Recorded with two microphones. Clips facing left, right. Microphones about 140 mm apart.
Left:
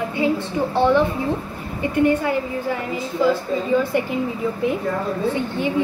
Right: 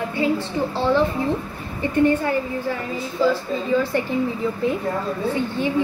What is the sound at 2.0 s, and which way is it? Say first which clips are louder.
Speech: even; 10° left (ahead or behind).